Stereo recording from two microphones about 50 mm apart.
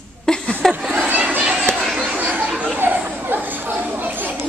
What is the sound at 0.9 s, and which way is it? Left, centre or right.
Chatter, right.